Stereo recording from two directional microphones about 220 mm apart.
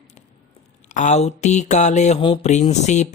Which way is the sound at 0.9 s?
35° left (ahead or behind).